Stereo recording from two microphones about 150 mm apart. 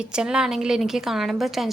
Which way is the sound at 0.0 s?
5° right (ahead or behind).